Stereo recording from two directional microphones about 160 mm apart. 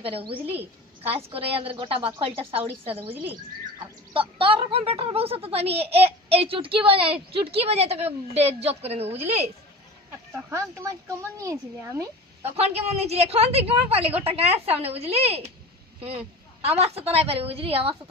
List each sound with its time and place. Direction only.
0.0 s speech: 35° right (ahead or behind)
3.1 s speech: 10° right (ahead or behind)
3.8 s speech: 35° right (ahead or behind)
10.3 s speech: 15° right (ahead or behind)
12.4 s speech: 40° right (ahead or behind)
16.6 s speech: 40° right (ahead or behind)